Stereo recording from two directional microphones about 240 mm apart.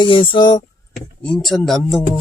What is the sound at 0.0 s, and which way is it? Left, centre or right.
Speech, left.